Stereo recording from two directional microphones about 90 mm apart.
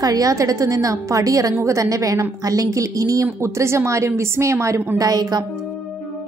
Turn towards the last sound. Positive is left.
turn(degrees=-45)  # may be behind; listen again after turning